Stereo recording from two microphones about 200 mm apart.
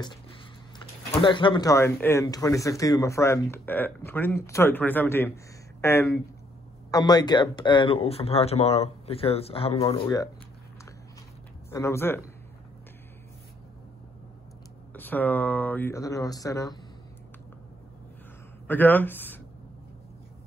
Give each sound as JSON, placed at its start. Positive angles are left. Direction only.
{"t": 0.0, "sound": "speech", "side_deg": 20}
{"t": 10.0, "sound": "speech", "side_deg": 15}
{"t": 11.7, "sound": "speech", "side_deg": 15}
{"t": 15.0, "sound": "speech", "side_deg": 10}
{"t": 18.7, "sound": "speech", "side_deg": 10}